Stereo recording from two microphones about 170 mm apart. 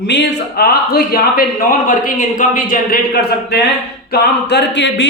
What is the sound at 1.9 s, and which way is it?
A man's voice, 50° left (ahead or behind).